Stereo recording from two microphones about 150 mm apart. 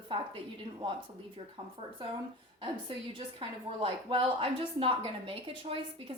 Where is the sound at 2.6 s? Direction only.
35° right (ahead or behind).